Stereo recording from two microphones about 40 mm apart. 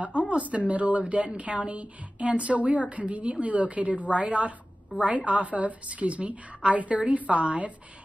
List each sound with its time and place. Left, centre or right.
0.2 s a woman's voice: right